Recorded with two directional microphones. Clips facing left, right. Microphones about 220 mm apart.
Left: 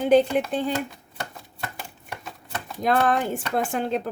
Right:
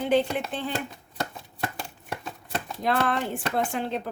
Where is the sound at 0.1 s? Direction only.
45° left (ahead or behind).